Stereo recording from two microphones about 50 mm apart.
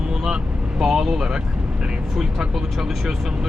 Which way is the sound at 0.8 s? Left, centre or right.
Centre.